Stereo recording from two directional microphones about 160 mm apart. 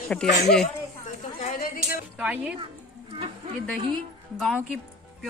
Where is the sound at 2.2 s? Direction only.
5° right (ahead or behind).